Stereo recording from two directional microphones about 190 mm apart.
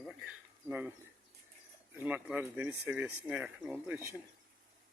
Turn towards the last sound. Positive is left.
turn(degrees=-5)  # may be behind; listen again after turning